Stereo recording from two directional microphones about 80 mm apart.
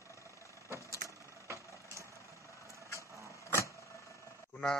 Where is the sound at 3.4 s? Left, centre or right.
Left.